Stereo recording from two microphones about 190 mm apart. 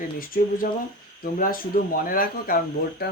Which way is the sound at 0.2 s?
50° left (ahead or behind).